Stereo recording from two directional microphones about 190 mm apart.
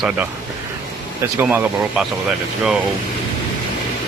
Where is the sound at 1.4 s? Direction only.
10° right (ahead or behind).